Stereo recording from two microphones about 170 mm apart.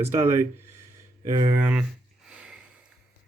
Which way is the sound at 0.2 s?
15° right (ahead or behind).